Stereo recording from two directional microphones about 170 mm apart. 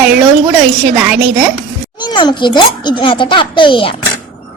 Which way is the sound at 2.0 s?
25° left (ahead or behind).